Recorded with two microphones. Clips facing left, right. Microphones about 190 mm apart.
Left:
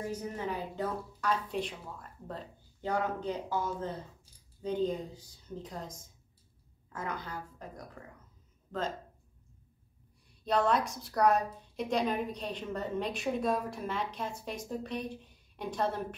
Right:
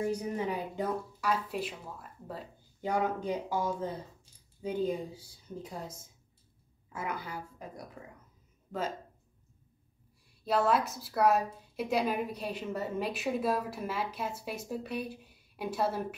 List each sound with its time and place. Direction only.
0.1 s a woman's voice: 15° right (ahead or behind)
10.4 s a woman's voice: 5° right (ahead or behind)